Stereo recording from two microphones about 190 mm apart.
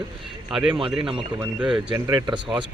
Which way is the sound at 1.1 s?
5° right (ahead or behind).